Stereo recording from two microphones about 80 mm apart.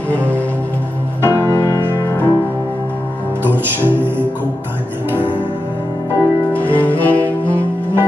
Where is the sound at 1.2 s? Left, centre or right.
Right.